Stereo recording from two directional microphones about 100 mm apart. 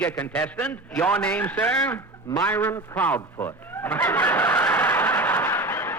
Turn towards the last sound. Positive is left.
turn(degrees=20)  # may be behind; listen again after turning